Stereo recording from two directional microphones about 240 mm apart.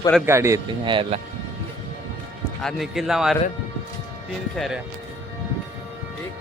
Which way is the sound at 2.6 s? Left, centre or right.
Centre.